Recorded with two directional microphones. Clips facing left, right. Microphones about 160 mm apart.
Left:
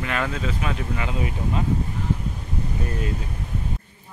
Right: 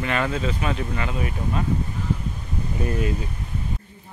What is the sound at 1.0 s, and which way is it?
Speech, 20° left (ahead or behind).